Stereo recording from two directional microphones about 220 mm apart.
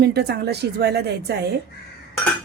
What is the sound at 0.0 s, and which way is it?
Speech, 45° right (ahead or behind).